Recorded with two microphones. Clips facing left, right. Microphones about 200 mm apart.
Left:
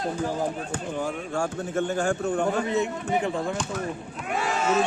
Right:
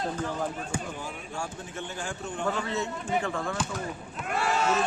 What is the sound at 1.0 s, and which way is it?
Speech, 50° left (ahead or behind).